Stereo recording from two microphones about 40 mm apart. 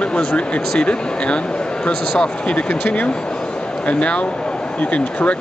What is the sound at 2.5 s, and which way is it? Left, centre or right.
Speech, left.